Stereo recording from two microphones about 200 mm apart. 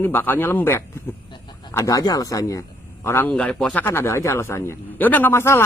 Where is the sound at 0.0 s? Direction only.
10° left (ahead or behind).